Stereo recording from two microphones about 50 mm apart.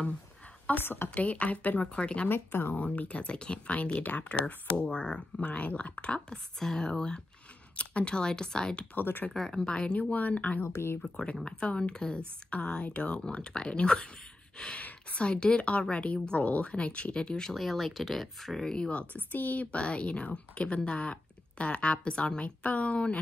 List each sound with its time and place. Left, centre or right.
0.7 s speech: left
1.1 s a woman's voice: left
2.0 s a woman's voice: left
2.2 s speech: left
2.8 s a woman's voice: left
8.9 s speech: left
9.3 s speech: centre
10.1 s speech: left
11.0 s a woman's voice: centre
15.1 s a woman's voice: centre
17.6 s speech: centre; by 19.0 s left
19.3 s a woman's voice: left